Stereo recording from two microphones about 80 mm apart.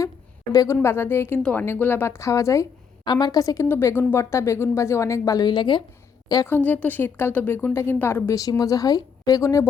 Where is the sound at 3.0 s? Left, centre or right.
Left.